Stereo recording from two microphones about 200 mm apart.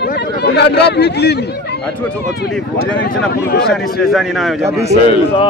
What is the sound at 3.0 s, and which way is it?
Speech, 55° left (ahead or behind).